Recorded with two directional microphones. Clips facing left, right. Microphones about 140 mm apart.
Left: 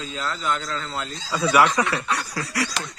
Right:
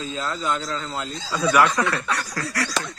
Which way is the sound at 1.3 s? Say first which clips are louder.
Even; 10° left (ahead or behind).